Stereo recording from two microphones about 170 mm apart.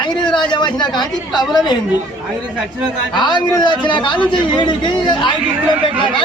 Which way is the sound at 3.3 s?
25° left (ahead or behind).